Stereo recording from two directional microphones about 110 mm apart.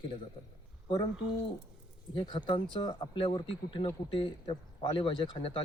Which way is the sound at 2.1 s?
45° left (ahead or behind).